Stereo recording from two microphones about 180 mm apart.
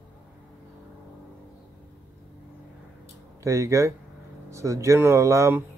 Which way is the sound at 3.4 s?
15° right (ahead or behind).